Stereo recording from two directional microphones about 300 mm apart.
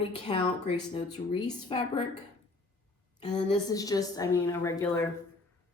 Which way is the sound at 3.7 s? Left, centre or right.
Centre.